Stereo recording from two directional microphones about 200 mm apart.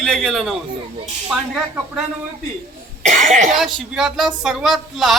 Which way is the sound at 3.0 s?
40° right (ahead or behind).